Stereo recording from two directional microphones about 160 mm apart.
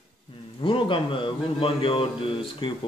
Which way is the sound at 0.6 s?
30° left (ahead or behind).